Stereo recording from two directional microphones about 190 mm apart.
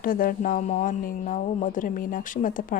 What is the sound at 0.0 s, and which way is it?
Speech, 50° left (ahead or behind).